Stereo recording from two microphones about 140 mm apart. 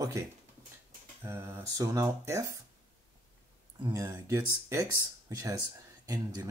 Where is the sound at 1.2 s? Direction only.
15° right (ahead or behind).